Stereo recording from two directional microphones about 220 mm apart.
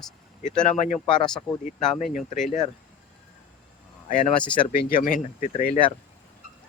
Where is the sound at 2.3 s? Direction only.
35° left (ahead or behind).